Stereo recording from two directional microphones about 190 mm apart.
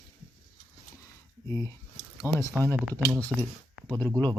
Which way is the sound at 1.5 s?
15° left (ahead or behind).